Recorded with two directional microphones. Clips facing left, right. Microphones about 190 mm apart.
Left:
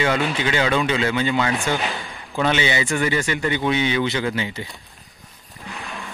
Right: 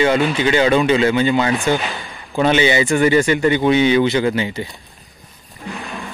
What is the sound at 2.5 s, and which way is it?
Speech, 45° right (ahead or behind).